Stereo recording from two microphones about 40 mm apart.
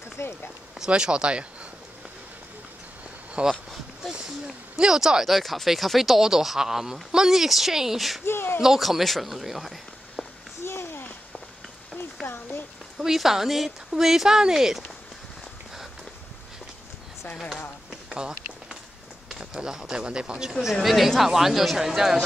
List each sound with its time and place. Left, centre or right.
0.7 s speech: right
3.4 s speech: right
4.7 s speech: centre
5.3 s speech: centre
8.3 s speech: left
8.5 s speech: centre
10.6 s a sound: left
12.3 s a sound: left
13.0 s speech: centre
19.2 s speech: centre
20.8 s speech: centre